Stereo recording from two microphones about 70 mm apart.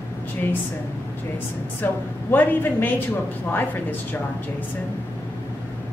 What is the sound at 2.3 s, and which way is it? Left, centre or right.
Speech, left.